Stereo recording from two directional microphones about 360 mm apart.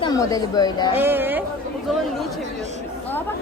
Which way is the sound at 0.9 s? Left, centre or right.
Centre.